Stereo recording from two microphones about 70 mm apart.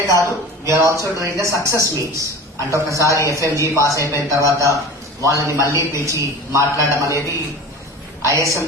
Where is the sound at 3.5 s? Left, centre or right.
Right.